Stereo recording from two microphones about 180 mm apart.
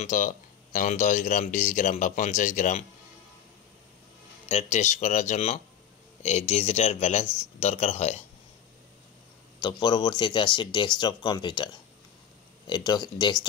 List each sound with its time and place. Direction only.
0.0 s speech: 45° left (ahead or behind)
4.5 s speech: 35° left (ahead or behind)
9.6 s speech: 25° left (ahead or behind)